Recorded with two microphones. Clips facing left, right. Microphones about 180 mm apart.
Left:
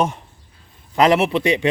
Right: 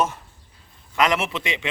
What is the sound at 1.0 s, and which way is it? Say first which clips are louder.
Speech: left 7 dB; 35° left (ahead or behind).